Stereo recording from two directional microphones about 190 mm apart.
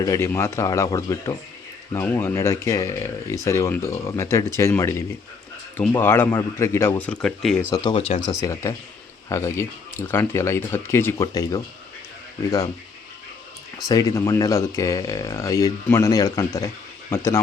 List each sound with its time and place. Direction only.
0.0 s speech: 15° left (ahead or behind)
7.7 s speech: 20° left (ahead or behind)
13.8 s speech: 20° left (ahead or behind)